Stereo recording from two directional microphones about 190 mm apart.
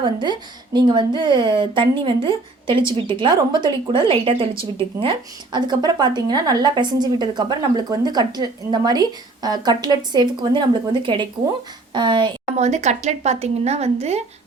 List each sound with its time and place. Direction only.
0.0 s speech: 25° right (ahead or behind)
12.5 s speech: 35° right (ahead or behind)